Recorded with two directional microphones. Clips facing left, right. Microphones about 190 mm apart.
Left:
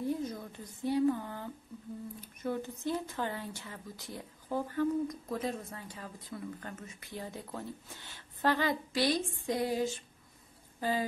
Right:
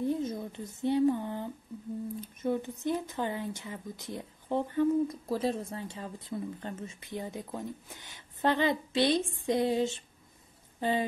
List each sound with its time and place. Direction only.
0.0 s speech: 20° right (ahead or behind)